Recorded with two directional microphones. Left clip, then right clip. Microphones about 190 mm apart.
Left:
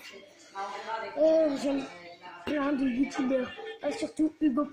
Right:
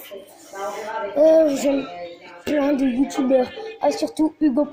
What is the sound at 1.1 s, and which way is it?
Speech, 20° right (ahead or behind).